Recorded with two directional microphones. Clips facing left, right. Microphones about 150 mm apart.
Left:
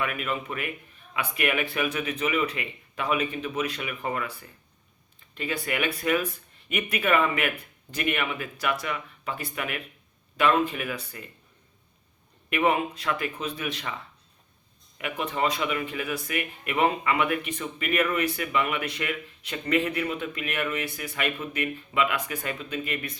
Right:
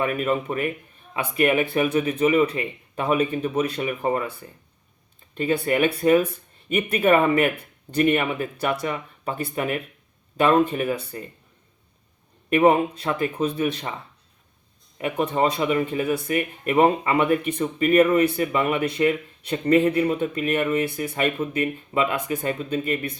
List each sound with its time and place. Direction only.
0.0 s speech: 35° right (ahead or behind)
5.6 s speech: 35° right (ahead or behind)
12.5 s speech: 40° right (ahead or behind)
14.9 s speech: 35° right (ahead or behind)